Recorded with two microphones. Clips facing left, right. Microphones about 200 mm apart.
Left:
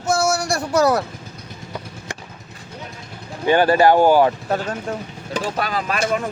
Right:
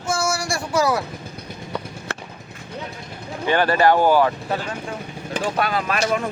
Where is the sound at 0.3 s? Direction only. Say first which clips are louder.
Left 3 dB; 65° left (ahead or behind).